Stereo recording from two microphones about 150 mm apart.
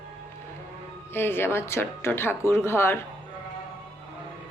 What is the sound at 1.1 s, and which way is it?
A man's voice, 15° left (ahead or behind).